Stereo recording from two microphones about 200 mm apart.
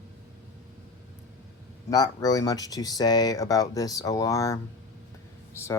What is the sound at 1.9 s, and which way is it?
Speech, 20° left (ahead or behind).